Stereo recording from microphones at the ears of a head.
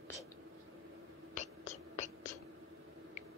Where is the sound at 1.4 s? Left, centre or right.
Left.